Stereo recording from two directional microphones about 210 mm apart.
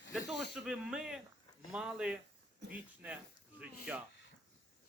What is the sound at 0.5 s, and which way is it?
Speech, 5° right (ahead or behind).